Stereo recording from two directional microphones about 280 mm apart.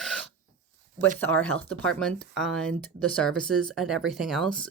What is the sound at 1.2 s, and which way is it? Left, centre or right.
Speech, centre.